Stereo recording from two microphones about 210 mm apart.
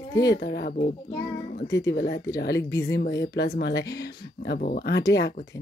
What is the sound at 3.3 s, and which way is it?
Speech, 50° left (ahead or behind).